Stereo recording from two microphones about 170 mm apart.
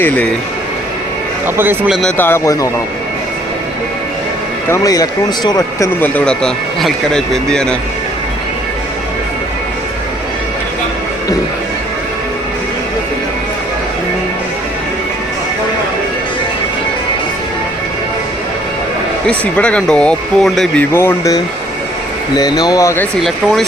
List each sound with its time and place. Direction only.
1.5 s speech: 10° right (ahead or behind)
2.0 s speech: 10° left (ahead or behind)
4.7 s speech: 20° left (ahead or behind)
6.0 s speech: 5° left (ahead or behind)
19.3 s speech: 5° left (ahead or behind)
20.9 s speech: 15° left (ahead or behind)